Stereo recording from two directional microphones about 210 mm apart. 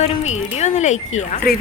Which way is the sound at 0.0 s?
30° left (ahead or behind).